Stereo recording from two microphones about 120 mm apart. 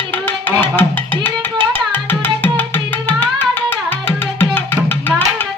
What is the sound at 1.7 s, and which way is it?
Tabla, 15° left (ahead or behind).